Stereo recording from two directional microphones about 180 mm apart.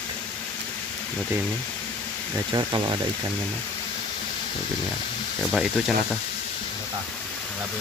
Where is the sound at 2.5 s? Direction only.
25° right (ahead or behind).